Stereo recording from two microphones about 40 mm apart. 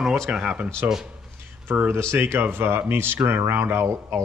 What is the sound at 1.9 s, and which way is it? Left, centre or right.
Speech, right.